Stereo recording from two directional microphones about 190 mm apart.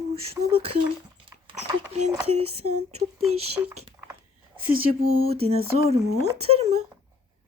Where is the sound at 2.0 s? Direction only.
35° right (ahead or behind).